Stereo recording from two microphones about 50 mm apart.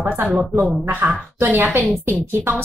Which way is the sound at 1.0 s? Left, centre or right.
Right.